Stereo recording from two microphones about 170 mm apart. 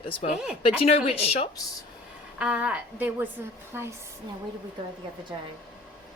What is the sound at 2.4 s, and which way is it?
A woman's voice, 5° right (ahead or behind).